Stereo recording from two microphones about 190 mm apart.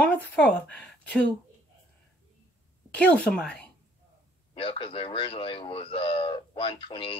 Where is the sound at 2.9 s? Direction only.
5° left (ahead or behind).